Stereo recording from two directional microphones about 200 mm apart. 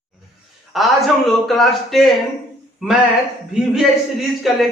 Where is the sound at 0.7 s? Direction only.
Centre (ahead or behind).